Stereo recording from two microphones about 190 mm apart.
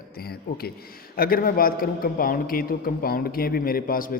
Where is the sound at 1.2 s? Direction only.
50° left (ahead or behind).